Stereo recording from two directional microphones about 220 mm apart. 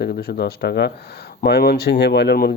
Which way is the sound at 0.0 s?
45° left (ahead or behind).